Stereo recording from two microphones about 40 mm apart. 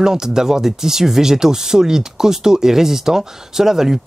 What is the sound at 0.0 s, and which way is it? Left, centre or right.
Speech, centre.